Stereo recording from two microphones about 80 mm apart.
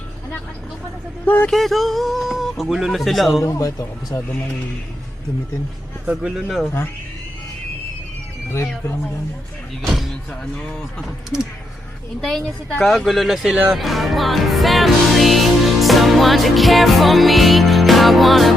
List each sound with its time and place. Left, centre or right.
1.2 s speech: left
1.5 s music: centre
3.4 s speech: left
6.1 s speech: centre
12.2 s a woman's voice: centre